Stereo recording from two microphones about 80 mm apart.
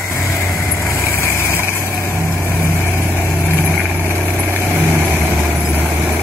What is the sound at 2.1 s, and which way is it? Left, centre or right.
Vehicle, left.